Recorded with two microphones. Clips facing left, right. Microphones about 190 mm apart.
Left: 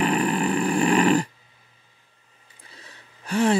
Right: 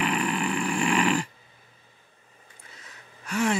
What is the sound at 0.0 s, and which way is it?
Dog, 35° left (ahead or behind).